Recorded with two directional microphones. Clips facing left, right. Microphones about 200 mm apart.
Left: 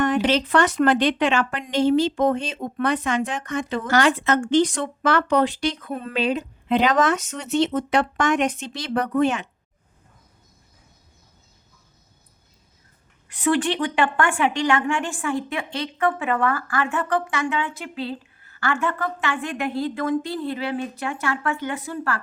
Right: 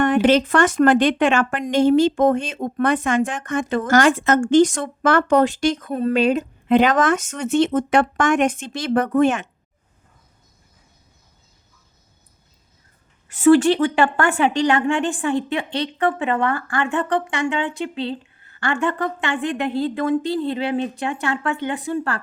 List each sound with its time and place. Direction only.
0.0 s speech: 55° right (ahead or behind)
13.4 s a woman's voice: 40° right (ahead or behind)